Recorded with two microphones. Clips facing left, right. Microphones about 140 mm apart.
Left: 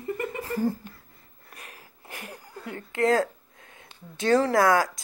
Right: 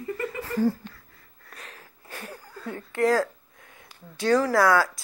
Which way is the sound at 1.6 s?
10° left (ahead or behind).